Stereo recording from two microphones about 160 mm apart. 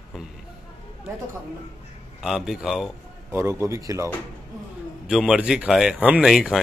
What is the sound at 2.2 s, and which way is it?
Speech, centre (ahead or behind).